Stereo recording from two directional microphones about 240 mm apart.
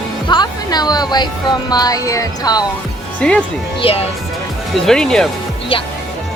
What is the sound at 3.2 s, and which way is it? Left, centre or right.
Speech, centre.